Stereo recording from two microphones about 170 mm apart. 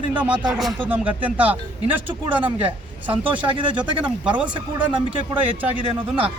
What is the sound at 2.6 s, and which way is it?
Speech, 10° right (ahead or behind).